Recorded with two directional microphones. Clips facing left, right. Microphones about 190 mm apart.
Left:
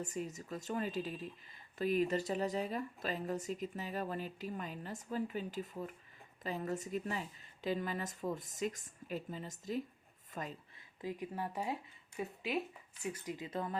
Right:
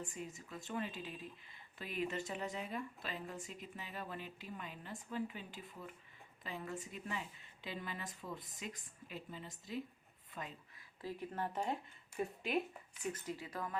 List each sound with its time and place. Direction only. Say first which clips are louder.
0.0 s a woman's voice: left 6 dB; 40° left (ahead or behind)
11.0 s speech: left 2 dB; 15° left (ahead or behind)
13.1 s speech: left 4 dB; 15° left (ahead or behind)